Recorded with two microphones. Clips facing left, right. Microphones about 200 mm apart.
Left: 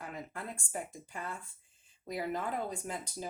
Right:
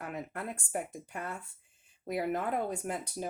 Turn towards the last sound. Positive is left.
turn(degrees=-60)  # may be behind; listen again after turning